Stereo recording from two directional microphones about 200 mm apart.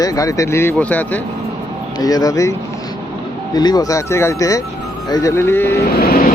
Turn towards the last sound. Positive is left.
turn(degrees=50)  # may be behind; listen again after turning